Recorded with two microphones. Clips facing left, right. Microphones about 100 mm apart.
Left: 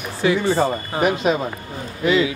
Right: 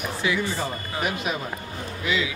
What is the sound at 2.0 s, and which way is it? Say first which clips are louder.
Speech: left 9 dB; 35° left (ahead or behind).